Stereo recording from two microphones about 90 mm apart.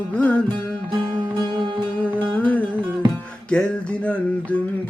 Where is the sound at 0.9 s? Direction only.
60° right (ahead or behind).